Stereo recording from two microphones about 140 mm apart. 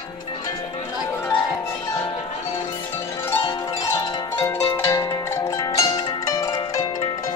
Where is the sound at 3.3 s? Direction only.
35° left (ahead or behind).